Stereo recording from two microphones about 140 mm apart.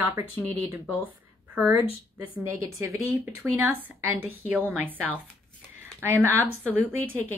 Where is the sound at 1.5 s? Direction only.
10° right (ahead or behind).